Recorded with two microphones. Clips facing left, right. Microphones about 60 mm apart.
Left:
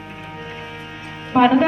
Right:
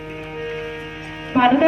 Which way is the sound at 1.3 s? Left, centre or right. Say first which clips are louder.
Even; centre.